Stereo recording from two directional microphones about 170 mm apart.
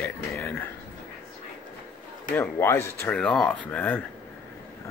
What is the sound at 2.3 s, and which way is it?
Speech, 10° left (ahead or behind).